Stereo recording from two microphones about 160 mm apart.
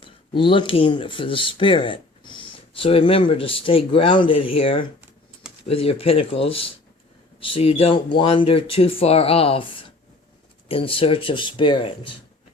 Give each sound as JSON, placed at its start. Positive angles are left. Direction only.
{"t": 0.0, "sound": "speech", "side_deg": 30}